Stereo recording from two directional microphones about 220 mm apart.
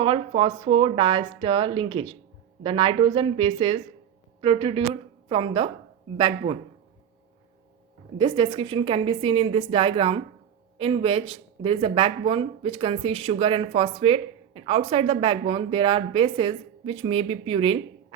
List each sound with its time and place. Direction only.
0.0 s a woman's voice: 25° right (ahead or behind)
8.2 s speech: 25° right (ahead or behind)